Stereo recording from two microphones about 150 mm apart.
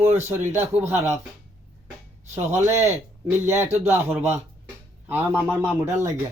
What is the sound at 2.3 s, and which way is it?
Speech, 15° right (ahead or behind).